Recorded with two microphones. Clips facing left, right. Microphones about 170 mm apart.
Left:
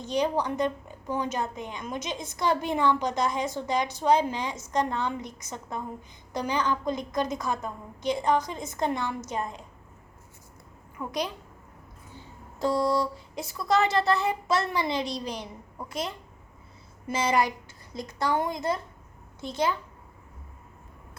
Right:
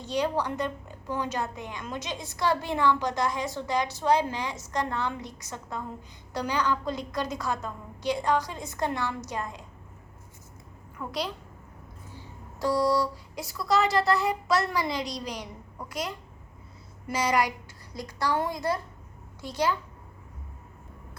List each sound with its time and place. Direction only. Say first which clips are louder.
0.0 s a woman's voice: left 1 dB; 20° left (ahead or behind)
11.0 s a child's voice: left 1 dB; 10° left (ahead or behind)
12.5 s a woman's voice: even; 25° left (ahead or behind)